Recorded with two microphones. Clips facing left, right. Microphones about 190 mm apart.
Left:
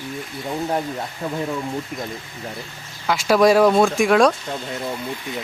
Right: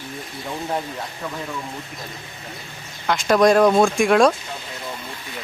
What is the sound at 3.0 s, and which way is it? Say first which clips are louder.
Speech: even; 5° left (ahead or behind).